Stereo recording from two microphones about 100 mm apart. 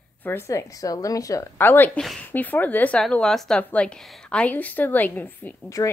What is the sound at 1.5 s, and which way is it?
A woman's voice, 20° left (ahead or behind).